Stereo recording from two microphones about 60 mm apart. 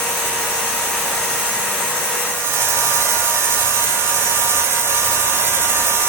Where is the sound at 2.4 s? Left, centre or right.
Right.